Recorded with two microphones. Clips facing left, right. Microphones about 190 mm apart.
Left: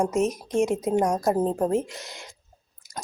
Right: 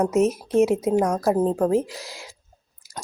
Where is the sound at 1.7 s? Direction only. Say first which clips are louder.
Right 3 dB; centre (ahead or behind).